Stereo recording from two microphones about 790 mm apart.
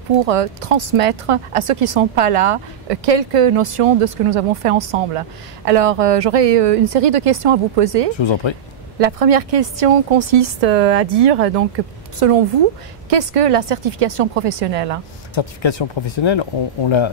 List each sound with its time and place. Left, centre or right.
0.2 s a woman's voice: right
8.2 s speech: left
9.0 s a woman's voice: right
15.3 s speech: left